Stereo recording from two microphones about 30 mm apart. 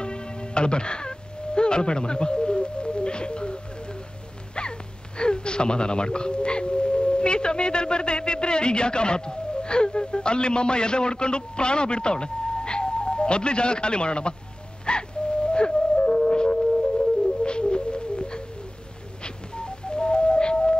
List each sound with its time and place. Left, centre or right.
0.0 s music: left
4.6 s speech: left
14.9 s music: left
19.2 s a sound: left